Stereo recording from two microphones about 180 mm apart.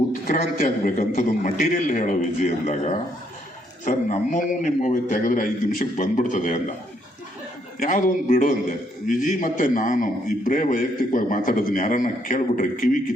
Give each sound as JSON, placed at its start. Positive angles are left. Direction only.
{"t": 0.3, "sound": "a man's voice", "side_deg": 45}
{"t": 7.8, "sound": "a man's voice", "side_deg": 45}